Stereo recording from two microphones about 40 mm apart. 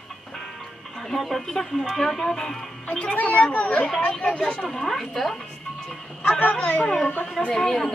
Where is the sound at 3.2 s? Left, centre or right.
Left.